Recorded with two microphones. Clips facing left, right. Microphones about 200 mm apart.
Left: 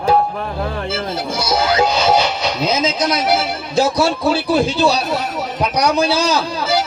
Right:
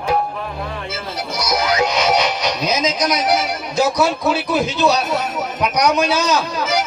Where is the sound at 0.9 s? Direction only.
30° left (ahead or behind).